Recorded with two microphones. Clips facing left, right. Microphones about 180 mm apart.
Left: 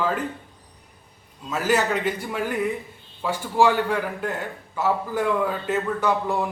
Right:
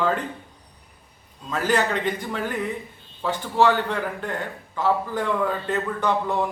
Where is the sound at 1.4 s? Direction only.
5° left (ahead or behind).